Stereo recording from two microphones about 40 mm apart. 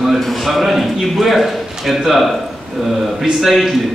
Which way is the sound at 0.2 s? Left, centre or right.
Centre.